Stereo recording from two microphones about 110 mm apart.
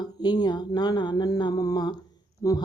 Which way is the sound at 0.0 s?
40° left (ahead or behind).